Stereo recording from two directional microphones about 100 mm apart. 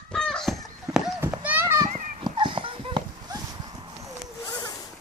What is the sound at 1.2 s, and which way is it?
Children playing, 20° right (ahead or behind).